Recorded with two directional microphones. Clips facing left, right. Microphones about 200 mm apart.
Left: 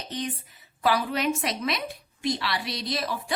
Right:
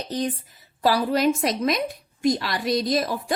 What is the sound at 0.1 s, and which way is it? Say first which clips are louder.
A woman's voice: right 5 dB; 40° right (ahead or behind).